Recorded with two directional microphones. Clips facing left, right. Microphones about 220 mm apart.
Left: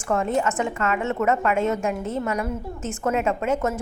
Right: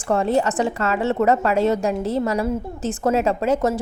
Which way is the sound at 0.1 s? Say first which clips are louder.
Right 3 dB; 35° right (ahead or behind).